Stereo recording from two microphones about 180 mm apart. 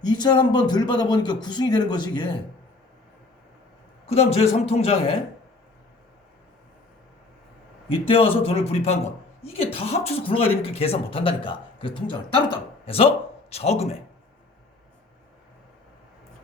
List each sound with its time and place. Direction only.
0.0 s speech: 25° left (ahead or behind)
4.0 s speech: 35° left (ahead or behind)
7.9 s a woman's voice: 30° left (ahead or behind)